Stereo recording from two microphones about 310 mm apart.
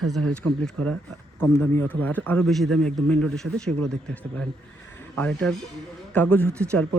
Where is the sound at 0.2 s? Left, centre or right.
Right.